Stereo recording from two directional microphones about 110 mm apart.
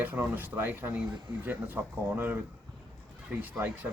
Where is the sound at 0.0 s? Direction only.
15° right (ahead or behind).